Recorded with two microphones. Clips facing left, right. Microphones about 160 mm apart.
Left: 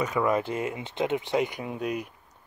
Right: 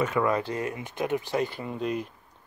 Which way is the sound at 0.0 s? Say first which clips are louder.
Even; 15° left (ahead or behind).